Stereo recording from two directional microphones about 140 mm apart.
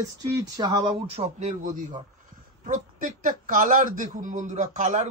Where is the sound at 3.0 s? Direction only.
75° right (ahead or behind).